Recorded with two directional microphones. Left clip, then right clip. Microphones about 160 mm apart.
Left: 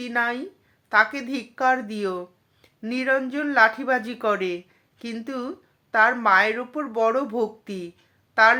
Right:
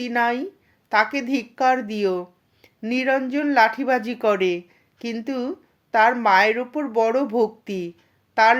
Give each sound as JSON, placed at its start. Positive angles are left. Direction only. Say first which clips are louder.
{"t": 0.0, "sound": "speech", "louder": "right 3 dB", "side_deg": -35}